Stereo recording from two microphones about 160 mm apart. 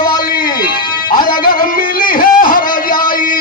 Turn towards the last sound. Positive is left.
turn(degrees=60)  # may be behind; listen again after turning